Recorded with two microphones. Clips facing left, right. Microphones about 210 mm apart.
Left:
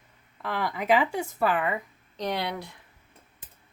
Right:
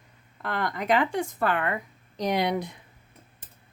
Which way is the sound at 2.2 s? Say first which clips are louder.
Right 5 dB; 15° right (ahead or behind).